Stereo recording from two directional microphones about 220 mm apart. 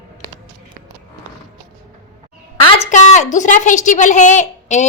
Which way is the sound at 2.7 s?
30° left (ahead or behind).